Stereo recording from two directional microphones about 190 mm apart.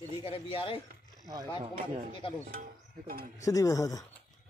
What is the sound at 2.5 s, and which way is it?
Speech, 50° right (ahead or behind).